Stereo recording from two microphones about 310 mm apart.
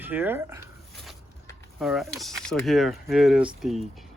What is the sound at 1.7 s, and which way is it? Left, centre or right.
Speech, centre.